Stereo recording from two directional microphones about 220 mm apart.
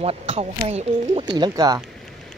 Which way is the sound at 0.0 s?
25° right (ahead or behind).